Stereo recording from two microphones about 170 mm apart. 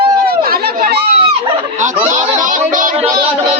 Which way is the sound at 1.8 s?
45° right (ahead or behind).